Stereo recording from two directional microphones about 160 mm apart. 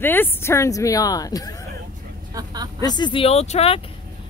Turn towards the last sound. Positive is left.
turn(degrees=40)  # may be behind; listen again after turning